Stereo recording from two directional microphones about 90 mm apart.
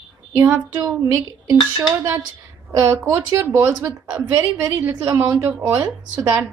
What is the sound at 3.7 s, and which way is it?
Speech, 45° right (ahead or behind).